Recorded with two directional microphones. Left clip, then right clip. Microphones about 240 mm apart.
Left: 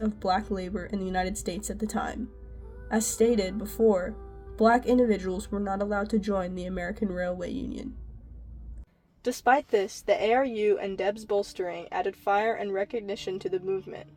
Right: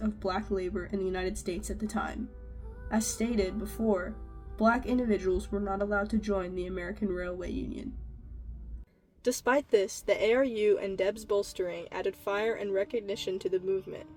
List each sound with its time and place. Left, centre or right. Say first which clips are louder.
0.0 s speech: left 6 dB; left
9.2 s speech: left 4 dB; centre